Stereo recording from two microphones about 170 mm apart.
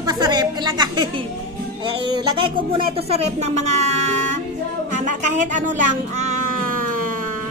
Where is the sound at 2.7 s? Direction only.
35° right (ahead or behind).